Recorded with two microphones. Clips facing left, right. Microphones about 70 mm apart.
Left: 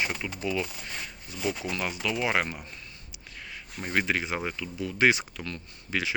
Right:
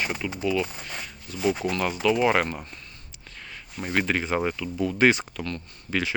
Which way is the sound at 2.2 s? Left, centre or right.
Centre.